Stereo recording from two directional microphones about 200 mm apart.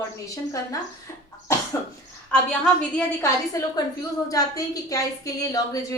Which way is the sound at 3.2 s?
15° left (ahead or behind).